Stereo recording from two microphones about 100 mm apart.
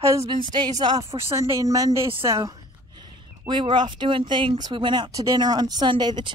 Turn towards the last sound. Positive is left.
turn(degrees=-50)  # may be behind; listen again after turning